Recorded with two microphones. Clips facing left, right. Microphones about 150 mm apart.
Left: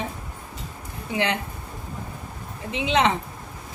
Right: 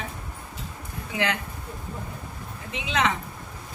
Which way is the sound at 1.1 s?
30° left (ahead or behind).